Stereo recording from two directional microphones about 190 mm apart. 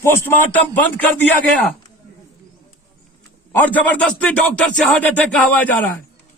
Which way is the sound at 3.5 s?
10° left (ahead or behind).